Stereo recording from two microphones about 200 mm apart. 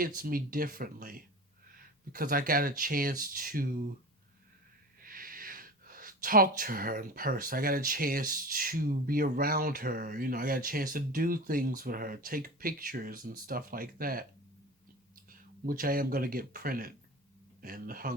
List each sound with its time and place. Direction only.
0.2 s speech: 45° right (ahead or behind)
4.9 s speech: 45° right (ahead or behind)